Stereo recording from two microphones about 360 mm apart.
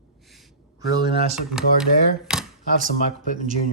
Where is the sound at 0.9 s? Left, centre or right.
Centre.